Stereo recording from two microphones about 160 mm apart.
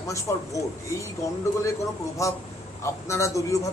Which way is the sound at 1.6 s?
20° left (ahead or behind).